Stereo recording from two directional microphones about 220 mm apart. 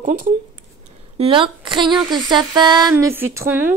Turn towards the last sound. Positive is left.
turn(degrees=-10)  # may be behind; listen again after turning